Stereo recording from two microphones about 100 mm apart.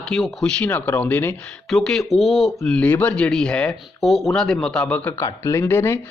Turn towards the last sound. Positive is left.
turn(degrees=20)  # may be behind; listen again after turning